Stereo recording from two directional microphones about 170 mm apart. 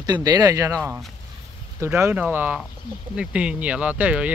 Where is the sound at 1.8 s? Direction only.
15° right (ahead or behind).